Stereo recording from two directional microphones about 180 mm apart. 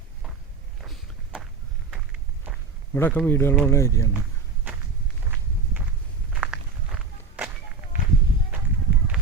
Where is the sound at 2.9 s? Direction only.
10° left (ahead or behind).